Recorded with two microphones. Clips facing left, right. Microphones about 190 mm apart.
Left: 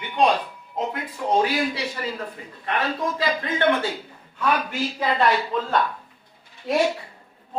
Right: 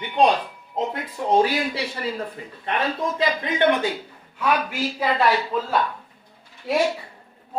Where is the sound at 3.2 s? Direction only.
20° right (ahead or behind).